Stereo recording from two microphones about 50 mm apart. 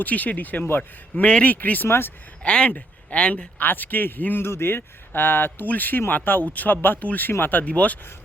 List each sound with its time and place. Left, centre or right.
0.0 s a man's voice: left
0.8 s a man's voice: left
1.9 s speech: left
2.4 s speech: left
3.6 s a man's voice: left
7.0 s a man's voice: left
7.3 s speech: left
7.6 s speech: left